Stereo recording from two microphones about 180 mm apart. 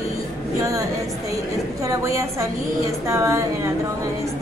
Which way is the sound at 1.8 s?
15° right (ahead or behind).